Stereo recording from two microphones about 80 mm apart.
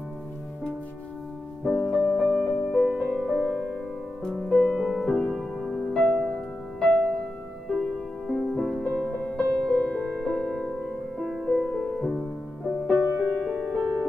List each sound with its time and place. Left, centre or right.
1.6 s music: centre
2.2 s music: left
2.7 s music: centre
3.1 s music: centre
8.3 s music: centre
13.5 s music: centre
13.7 s music: centre